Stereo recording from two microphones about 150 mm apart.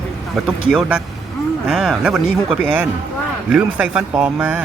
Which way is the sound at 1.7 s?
5° right (ahead or behind).